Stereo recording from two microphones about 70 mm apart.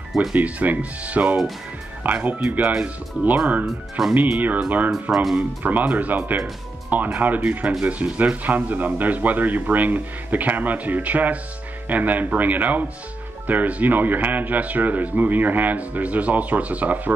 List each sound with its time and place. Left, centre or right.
0.1 s speech: centre
0.4 s speech: right
2.6 s speech: centre
3.3 s speech: right
5.1 s speech: centre
5.6 s speech: right